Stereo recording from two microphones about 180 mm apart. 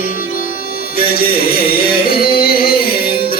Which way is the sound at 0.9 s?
55° left (ahead or behind).